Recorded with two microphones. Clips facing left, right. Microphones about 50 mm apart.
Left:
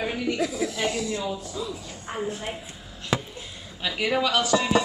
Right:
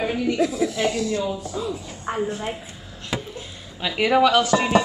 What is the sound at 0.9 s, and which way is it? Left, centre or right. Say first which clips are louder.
Speech: right 5 dB; centre.